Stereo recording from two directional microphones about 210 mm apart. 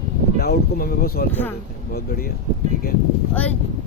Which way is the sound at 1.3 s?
10° left (ahead or behind).